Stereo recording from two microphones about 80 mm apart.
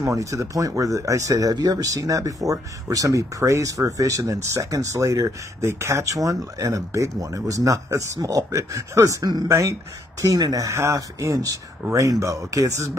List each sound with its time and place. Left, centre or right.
0.0 s speech: right
1.5 s speech: right